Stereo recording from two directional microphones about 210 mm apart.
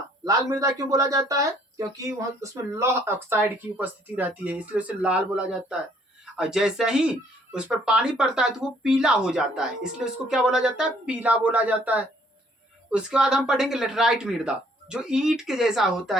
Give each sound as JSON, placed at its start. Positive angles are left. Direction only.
{"t": 0.3, "sound": "speech", "side_deg": -15}